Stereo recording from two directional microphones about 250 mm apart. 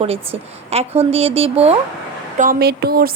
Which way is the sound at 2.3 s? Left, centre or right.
Right.